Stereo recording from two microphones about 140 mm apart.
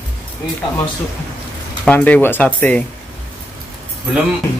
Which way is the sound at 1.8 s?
10° left (ahead or behind).